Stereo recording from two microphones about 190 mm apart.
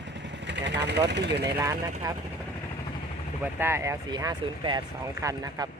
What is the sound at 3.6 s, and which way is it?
Speech, 15° right (ahead or behind).